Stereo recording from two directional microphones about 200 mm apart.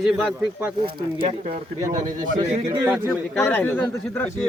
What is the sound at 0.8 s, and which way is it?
Speech, 25° right (ahead or behind).